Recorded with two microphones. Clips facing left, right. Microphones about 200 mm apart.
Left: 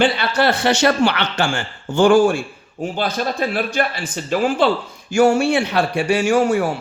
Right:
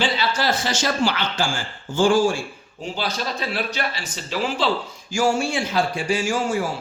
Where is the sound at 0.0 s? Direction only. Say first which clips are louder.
Left 6 dB; 60° left (ahead or behind).